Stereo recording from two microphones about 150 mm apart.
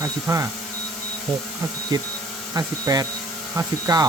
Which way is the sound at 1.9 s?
25° right (ahead or behind).